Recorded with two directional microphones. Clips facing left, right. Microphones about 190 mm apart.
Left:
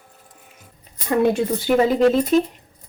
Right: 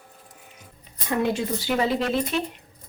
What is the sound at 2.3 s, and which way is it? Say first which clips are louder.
Speech: left 10 dB; 40° left (ahead or behind).